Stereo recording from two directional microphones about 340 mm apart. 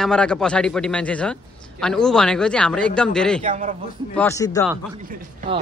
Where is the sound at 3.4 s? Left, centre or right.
Right.